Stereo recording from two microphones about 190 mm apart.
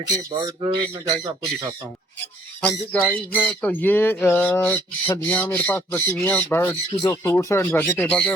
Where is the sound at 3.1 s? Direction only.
10° left (ahead or behind).